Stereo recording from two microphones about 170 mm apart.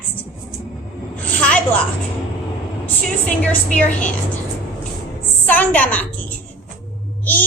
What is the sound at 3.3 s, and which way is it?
Speech, 10° left (ahead or behind).